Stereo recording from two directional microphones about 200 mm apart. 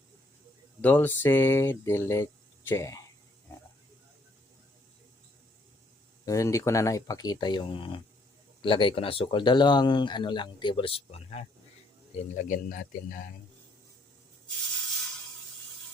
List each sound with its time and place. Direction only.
0.8 s speech: 10° left (ahead or behind)
6.2 s speech: 15° left (ahead or behind); by 13.3 s 45° left (ahead or behind)